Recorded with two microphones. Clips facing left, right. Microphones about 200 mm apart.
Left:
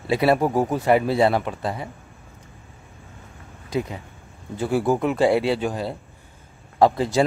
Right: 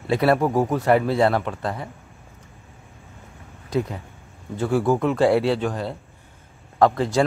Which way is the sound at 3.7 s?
5° left (ahead or behind).